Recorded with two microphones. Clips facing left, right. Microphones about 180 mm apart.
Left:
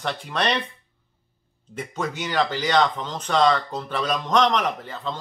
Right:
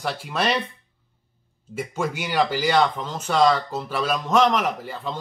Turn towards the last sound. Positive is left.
turn(degrees=-10)  # may be behind; listen again after turning